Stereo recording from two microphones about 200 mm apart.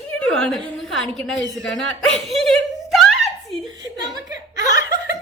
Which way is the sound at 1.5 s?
Centre (ahead or behind).